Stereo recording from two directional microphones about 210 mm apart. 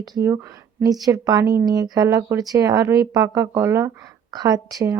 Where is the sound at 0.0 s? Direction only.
15° right (ahead or behind).